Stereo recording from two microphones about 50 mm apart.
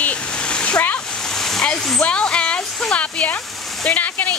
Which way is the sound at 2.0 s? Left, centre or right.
Left.